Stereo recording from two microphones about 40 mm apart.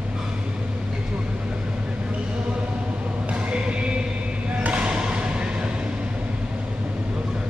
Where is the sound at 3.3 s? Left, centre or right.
Right.